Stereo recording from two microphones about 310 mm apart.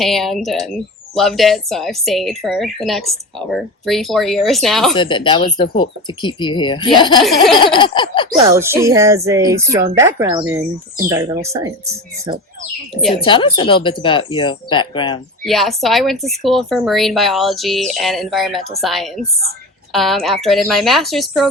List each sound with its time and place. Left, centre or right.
0.0 s speech: centre
4.9 s speech: centre
8.4 s speech: centre
13.2 s speech: centre
15.4 s speech: centre